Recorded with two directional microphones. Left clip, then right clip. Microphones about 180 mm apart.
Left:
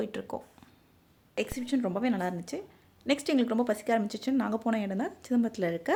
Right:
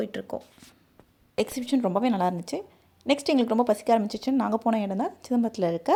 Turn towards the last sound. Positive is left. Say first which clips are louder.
# right 5 dB
turn(degrees=-15)  # may be behind; listen again after turning